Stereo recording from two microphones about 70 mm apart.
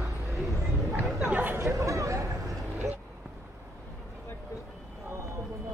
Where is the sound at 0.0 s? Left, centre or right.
Centre.